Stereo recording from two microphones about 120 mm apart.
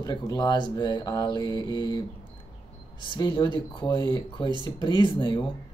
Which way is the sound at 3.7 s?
40° left (ahead or behind).